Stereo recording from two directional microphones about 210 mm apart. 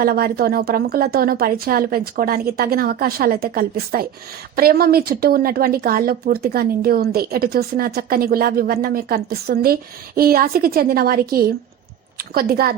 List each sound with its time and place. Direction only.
0.0 s speech: 45° right (ahead or behind)